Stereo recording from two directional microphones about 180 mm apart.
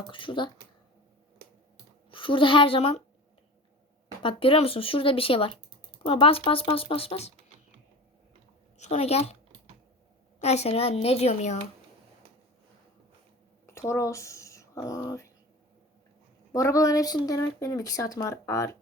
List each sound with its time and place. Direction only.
0.1 s speech: 30° left (ahead or behind)
2.0 s a woman's voice: 30° left (ahead or behind)
4.2 s speech: 30° left (ahead or behind)
8.8 s speech: 35° left (ahead or behind)
10.4 s speech: 35° left (ahead or behind)
13.7 s speech: 15° left (ahead or behind)
16.5 s speech: 20° left (ahead or behind)